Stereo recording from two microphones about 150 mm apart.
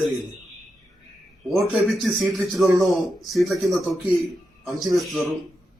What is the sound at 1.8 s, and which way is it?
Speech, centre (ahead or behind).